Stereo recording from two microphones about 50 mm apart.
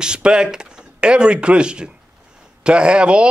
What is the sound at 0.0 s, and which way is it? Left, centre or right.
A man's voice, centre.